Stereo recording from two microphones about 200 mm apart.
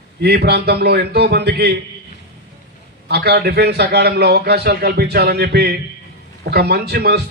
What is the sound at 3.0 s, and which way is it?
A man's voice, 55° right (ahead or behind).